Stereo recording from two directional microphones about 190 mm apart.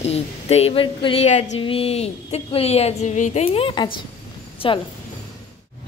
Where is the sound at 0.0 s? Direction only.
35° left (ahead or behind).